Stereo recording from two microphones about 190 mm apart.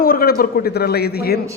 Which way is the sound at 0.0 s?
50° left (ahead or behind).